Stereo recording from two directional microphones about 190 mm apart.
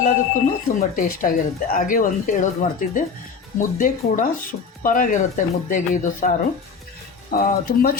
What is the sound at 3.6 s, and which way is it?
Speech, 45° left (ahead or behind).